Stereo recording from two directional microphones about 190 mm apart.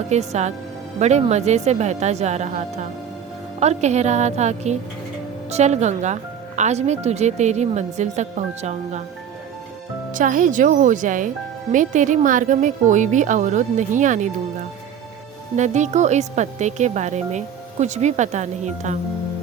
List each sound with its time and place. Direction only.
0.1 s speech: 35° right (ahead or behind)
10.1 s speech: 45° right (ahead or behind)
15.5 s speech: 40° right (ahead or behind)